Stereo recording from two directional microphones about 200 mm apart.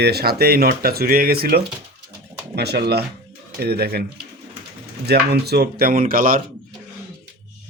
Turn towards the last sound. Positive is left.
turn(degrees=-45)  # may be behind; listen again after turning